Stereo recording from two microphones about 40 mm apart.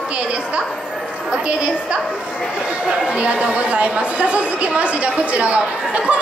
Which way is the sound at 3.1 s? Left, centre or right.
Right.